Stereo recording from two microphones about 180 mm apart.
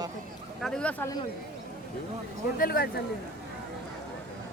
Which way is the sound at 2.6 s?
55° left (ahead or behind).